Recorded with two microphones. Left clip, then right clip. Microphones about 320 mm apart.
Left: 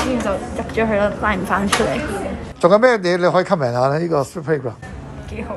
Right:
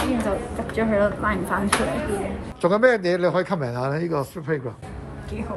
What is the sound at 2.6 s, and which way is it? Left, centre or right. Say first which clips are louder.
Speech: left 6 dB; centre.